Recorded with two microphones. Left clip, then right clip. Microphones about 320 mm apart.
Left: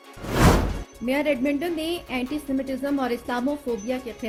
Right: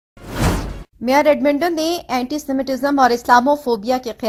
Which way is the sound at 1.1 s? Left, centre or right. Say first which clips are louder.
Right 10 dB; centre.